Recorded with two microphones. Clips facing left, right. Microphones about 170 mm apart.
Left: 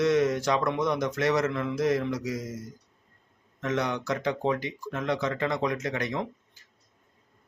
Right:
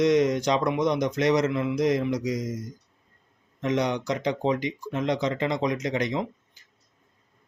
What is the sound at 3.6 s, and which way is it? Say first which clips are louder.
Speech: right 3 dB; 20° right (ahead or behind).